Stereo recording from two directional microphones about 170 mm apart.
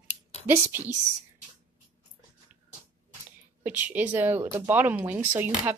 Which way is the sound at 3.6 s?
10° right (ahead or behind).